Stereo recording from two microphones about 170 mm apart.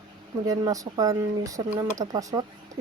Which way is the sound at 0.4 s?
20° right (ahead or behind).